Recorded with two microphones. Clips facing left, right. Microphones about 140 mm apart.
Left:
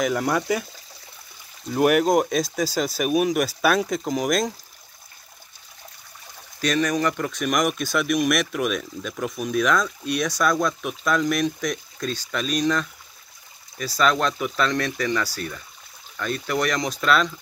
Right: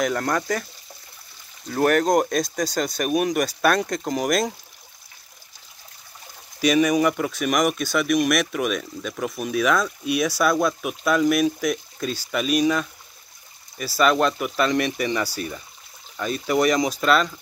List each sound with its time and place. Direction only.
0.0 s speech: 5° left (ahead or behind)
1.7 s speech: 10° left (ahead or behind)
6.6 s speech: 10° right (ahead or behind)